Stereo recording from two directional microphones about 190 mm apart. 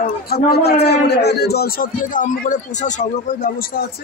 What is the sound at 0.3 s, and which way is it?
A man's voice, 55° left (ahead or behind).